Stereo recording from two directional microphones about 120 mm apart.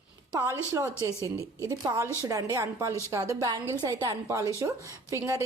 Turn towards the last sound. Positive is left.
turn(degrees=-25)  # may be behind; listen again after turning